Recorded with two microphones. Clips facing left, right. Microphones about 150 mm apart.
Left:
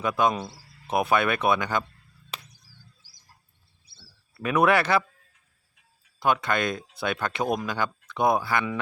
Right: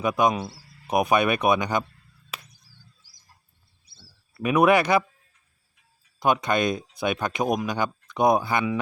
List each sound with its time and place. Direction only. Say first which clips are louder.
0.0 s speech: right 2 dB; 15° right (ahead or behind)
4.4 s speech: right 3 dB; 15° right (ahead or behind)
6.1 s speech: right 2 dB; 20° right (ahead or behind)